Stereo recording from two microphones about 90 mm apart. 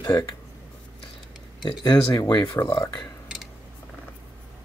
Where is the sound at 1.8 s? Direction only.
50° left (ahead or behind).